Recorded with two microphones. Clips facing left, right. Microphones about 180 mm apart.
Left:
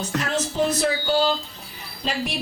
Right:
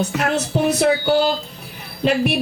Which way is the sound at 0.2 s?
65° right (ahead or behind).